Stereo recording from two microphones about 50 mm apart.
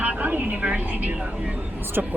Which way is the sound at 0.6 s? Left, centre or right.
Right.